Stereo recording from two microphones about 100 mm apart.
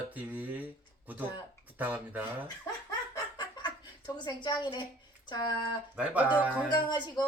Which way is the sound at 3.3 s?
45° left (ahead or behind).